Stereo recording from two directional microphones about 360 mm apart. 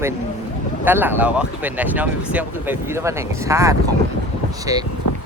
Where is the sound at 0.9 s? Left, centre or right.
Centre.